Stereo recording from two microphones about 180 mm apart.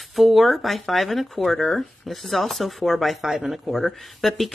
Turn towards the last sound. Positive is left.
turn(degrees=0)  # may be behind; listen again after turning